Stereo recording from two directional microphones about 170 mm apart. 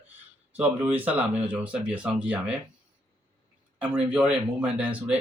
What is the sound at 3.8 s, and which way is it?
Speech, 5° right (ahead or behind).